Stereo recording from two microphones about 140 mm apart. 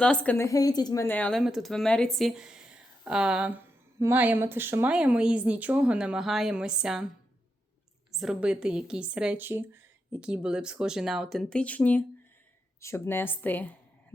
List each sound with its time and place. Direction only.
0.0 s a woman's voice: 10° left (ahead or behind); by 1.0 s 30° left (ahead or behind)
1.0 s speech: 10° left (ahead or behind)
1.4 s speech: centre (ahead or behind)
8.1 s a woman's voice: 5° right (ahead or behind); by 13.7 s 10° left (ahead or behind)